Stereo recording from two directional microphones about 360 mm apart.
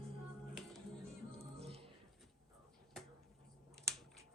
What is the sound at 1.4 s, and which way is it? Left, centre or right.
Music, centre.